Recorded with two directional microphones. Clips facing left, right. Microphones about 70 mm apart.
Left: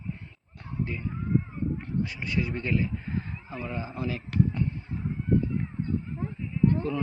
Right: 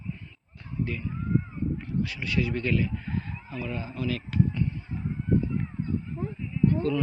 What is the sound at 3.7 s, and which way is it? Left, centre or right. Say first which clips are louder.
Speech: right 1 dB; left.